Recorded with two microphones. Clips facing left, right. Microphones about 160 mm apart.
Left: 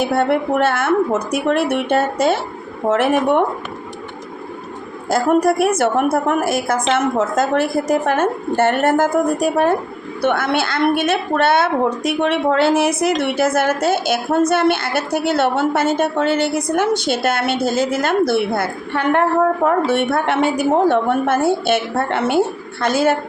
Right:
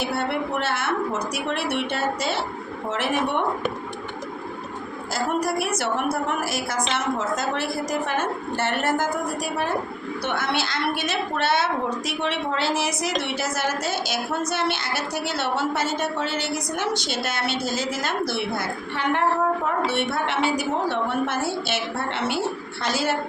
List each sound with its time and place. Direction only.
0.0 s a woman's voice: 50° left (ahead or behind)
5.0 s a woman's voice: 55° left (ahead or behind)